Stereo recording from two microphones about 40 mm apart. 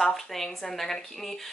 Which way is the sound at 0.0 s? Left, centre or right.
Centre.